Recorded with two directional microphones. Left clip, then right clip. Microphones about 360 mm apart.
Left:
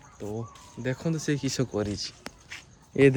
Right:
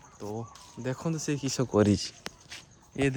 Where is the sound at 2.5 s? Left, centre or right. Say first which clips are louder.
Left 12 dB; centre.